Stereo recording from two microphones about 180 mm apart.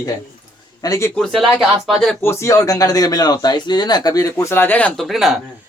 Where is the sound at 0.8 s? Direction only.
15° left (ahead or behind).